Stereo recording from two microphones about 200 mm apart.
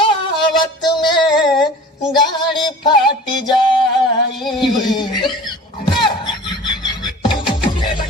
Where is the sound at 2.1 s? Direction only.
25° left (ahead or behind).